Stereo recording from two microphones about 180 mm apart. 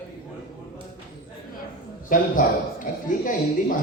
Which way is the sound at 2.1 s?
50° left (ahead or behind).